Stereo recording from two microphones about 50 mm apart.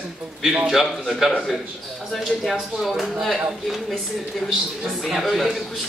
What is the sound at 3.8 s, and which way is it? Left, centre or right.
Speech, centre.